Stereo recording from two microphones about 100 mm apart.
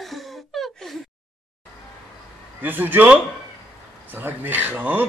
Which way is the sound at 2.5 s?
20° right (ahead or behind).